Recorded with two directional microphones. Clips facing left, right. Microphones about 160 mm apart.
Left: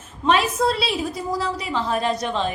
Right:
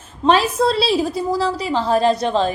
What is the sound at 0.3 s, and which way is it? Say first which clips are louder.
A woman's voice: right 4 dB; 30° right (ahead or behind).